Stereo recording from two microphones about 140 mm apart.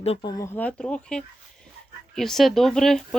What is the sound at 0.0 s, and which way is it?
Speech, 45° left (ahead or behind).